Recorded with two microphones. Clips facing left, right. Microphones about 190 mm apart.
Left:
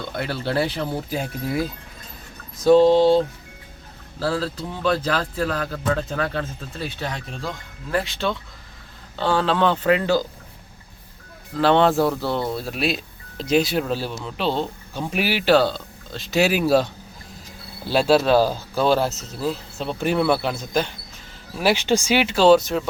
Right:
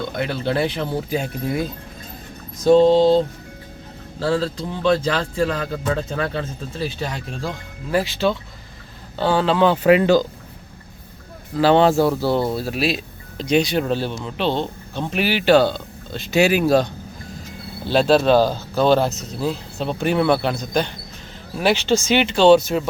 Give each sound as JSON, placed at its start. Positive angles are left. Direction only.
{"t": 0.2, "sound": "speech", "side_deg": 5}
{"t": 2.6, "sound": "speech", "side_deg": 5}
{"t": 4.2, "sound": "speech", "side_deg": 5}
{"t": 11.5, "sound": "speech", "side_deg": -5}
{"t": 21.6, "sound": "speech", "side_deg": 10}